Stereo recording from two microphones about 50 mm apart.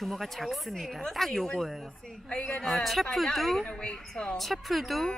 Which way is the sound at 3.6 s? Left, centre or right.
Centre.